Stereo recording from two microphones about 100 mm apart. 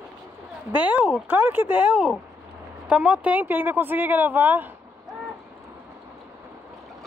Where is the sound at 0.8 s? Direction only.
15° right (ahead or behind).